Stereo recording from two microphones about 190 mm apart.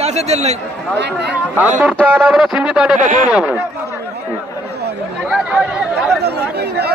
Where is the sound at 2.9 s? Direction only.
40° right (ahead or behind).